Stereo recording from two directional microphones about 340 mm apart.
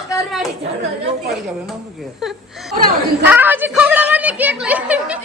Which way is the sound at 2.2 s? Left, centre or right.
Centre.